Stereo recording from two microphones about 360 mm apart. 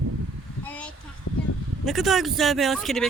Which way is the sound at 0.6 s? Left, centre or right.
Centre.